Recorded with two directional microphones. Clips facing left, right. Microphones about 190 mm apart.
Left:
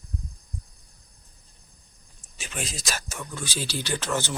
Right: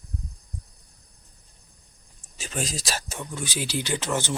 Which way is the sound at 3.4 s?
15° right (ahead or behind).